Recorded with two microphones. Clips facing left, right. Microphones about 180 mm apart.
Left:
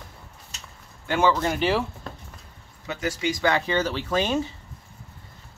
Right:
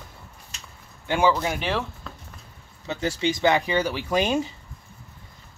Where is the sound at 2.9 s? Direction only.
30° right (ahead or behind).